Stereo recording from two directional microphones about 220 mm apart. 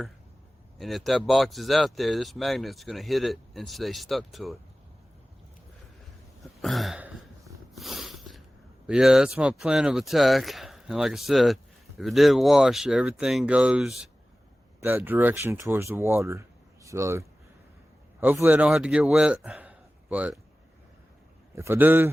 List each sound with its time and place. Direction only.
0.8 s speech: centre (ahead or behind)
6.4 s hiccup: centre (ahead or behind)
7.8 s a sound: centre (ahead or behind)
8.9 s a man's voice: 5° right (ahead or behind)
21.5 s a man's voice: 10° right (ahead or behind)